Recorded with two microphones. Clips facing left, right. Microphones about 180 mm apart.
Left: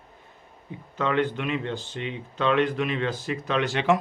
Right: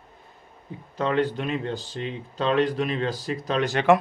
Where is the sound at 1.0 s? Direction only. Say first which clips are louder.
Right 1 dB; 35° right (ahead or behind).